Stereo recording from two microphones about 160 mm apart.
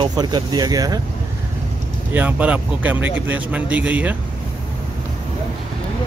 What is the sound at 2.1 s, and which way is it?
Speech, 10° right (ahead or behind).